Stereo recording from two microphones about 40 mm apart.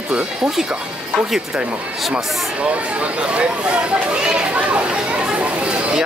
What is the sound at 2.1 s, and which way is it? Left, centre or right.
Speech, right.